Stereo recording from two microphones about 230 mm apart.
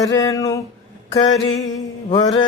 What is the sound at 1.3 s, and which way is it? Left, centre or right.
Music, left.